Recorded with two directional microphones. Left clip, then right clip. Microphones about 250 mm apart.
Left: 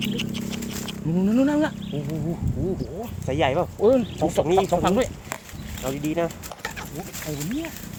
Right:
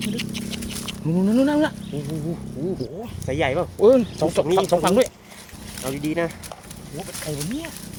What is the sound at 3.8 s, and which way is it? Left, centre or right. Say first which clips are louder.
Speech: right 5 dB; right.